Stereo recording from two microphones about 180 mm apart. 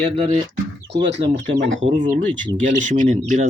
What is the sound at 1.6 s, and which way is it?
Speech, 90° right.